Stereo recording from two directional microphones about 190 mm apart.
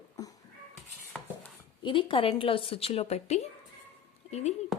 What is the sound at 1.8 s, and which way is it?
A woman's voice, 25° left (ahead or behind).